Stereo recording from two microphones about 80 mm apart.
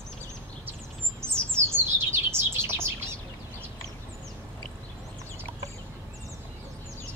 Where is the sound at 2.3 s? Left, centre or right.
Right.